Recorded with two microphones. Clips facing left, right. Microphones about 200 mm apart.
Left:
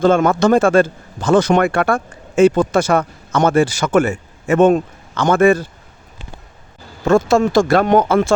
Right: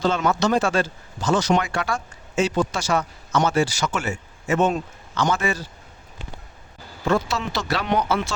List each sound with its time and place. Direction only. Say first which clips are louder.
0.0 s speech: left 8 dB; 50° left (ahead or behind)
7.0 s speech: left 10 dB; 45° left (ahead or behind)